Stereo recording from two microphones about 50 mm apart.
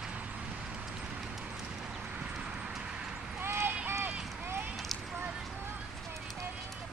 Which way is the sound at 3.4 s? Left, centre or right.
Right.